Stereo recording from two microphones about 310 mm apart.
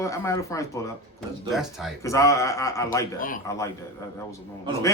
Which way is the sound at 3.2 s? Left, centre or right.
Left.